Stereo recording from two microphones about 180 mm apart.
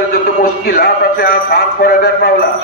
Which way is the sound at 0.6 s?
50° left (ahead or behind).